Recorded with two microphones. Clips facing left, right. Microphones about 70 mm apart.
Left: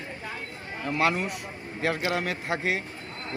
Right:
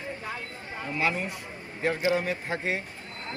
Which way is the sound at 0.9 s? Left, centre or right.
Left.